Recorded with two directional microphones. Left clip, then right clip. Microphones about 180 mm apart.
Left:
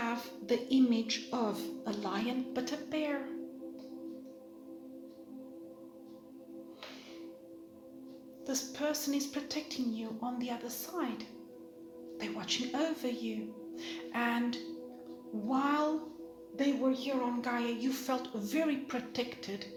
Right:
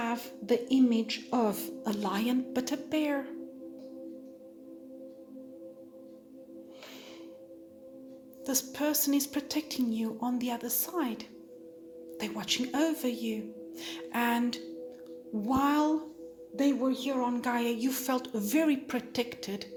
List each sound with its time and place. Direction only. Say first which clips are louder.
0.0 s music: right 3 dB; 50° right (ahead or behind)
8.4 s music: right 4 dB; 60° right (ahead or behind)